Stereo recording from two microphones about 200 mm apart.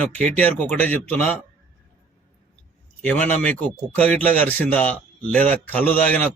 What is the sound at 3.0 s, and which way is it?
A man's voice, 5° left (ahead or behind).